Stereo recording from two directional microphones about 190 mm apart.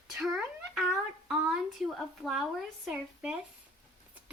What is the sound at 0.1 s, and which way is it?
Speech, centre (ahead or behind).